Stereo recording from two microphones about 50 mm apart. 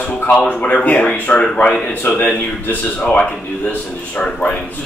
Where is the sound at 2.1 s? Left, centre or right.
Left.